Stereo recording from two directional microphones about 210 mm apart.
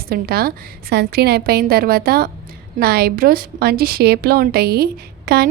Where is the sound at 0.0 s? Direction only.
45° right (ahead or behind).